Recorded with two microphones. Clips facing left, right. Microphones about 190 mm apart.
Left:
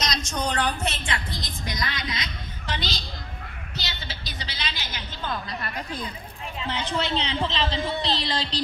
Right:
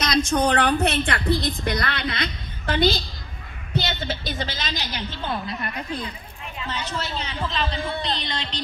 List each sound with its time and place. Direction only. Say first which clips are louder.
0.0 s a woman's voice: right 8 dB; 55° right (ahead or behind)
6.9 s a woman's voice: left 4 dB; 20° left (ahead or behind)